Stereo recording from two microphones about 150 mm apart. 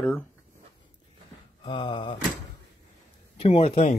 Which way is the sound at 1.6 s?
30° left (ahead or behind).